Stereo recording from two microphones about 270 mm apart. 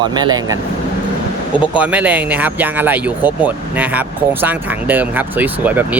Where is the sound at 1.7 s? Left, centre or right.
Centre.